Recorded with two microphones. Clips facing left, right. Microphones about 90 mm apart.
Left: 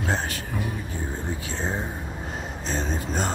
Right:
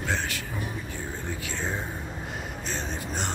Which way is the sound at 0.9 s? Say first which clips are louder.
Left 3 dB; 35° left (ahead or behind).